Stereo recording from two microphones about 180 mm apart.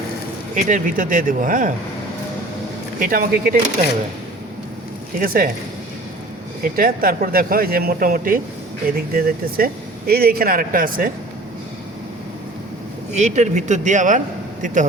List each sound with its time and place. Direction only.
0.5 s speech: 50° right (ahead or behind)
3.0 s speech: 55° right (ahead or behind)
5.2 s speech: 55° right (ahead or behind)
6.6 s speech: 55° right (ahead or behind)
13.1 s speech: 40° right (ahead or behind)